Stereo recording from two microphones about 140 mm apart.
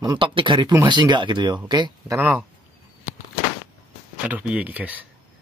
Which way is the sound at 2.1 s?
10° right (ahead or behind).